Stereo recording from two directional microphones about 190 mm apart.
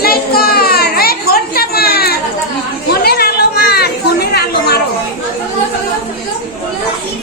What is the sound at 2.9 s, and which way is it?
Chatter, 55° left (ahead or behind).